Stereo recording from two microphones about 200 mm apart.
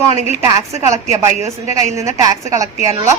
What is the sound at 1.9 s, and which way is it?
Speech, 15° right (ahead or behind).